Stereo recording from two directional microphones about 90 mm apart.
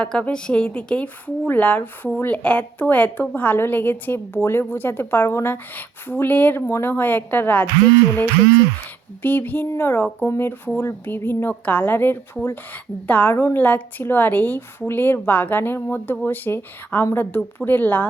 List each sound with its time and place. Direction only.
0.0 s a woman's voice: 10° left (ahead or behind)
9.2 s a woman's voice: 20° left (ahead or behind)